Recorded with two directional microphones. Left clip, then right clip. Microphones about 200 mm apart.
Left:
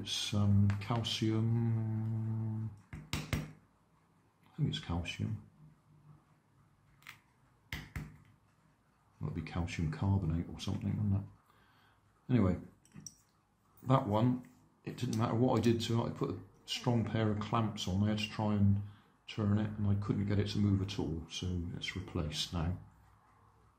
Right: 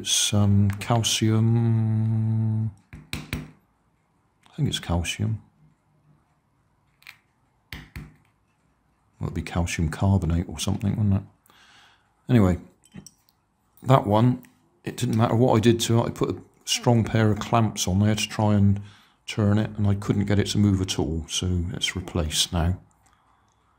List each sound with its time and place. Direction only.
0.0 s speech: 60° right (ahead or behind)
4.6 s speech: 60° right (ahead or behind)
9.2 s speech: 60° right (ahead or behind)
13.8 s speech: 55° right (ahead or behind)